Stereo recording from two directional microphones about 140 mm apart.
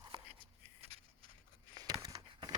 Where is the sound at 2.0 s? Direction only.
25° right (ahead or behind).